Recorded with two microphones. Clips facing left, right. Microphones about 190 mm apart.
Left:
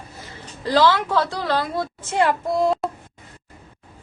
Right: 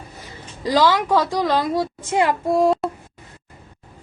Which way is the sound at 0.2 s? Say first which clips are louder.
Right 3 dB; 15° right (ahead or behind).